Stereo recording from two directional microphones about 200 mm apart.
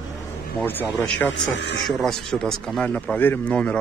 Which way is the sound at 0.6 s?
10° left (ahead or behind).